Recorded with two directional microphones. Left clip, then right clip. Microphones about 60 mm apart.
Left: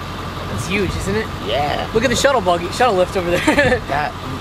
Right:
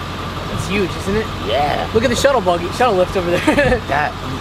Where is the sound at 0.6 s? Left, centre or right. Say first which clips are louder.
Right 1 dB; left.